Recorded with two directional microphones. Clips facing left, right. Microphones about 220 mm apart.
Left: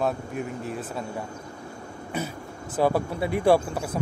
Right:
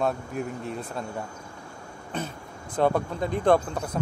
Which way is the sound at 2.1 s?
10° left (ahead or behind).